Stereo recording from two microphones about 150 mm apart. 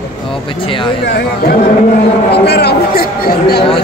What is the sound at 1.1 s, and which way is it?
Speech, 90° left.